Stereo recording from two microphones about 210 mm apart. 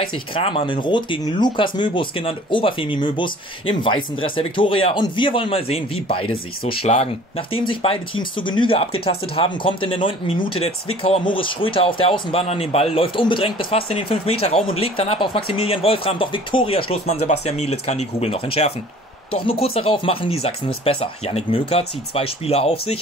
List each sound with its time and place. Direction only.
0.3 s speech: 25° left (ahead or behind)